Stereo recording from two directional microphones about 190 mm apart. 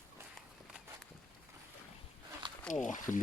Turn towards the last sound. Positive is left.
turn(degrees=40)  # may be behind; listen again after turning